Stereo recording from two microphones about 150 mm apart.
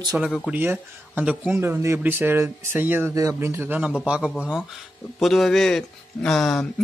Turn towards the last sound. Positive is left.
turn(degrees=5)  # may be behind; listen again after turning